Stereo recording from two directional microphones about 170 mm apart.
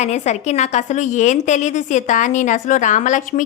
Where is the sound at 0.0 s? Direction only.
40° left (ahead or behind).